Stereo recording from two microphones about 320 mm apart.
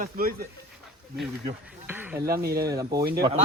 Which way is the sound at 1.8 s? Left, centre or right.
Centre.